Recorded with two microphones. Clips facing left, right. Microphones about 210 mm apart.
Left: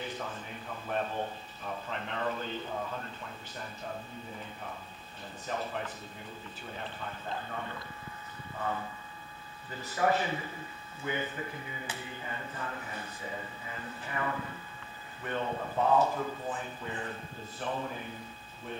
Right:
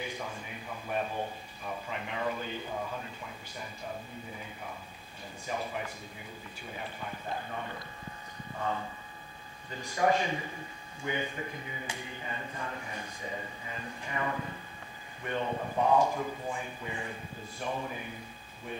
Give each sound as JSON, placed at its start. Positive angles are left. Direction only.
{"t": 0.0, "sound": "a man's voice", "side_deg": -10}
{"t": 5.5, "sound": "speech", "side_deg": -10}
{"t": 9.7, "sound": "speech", "side_deg": -15}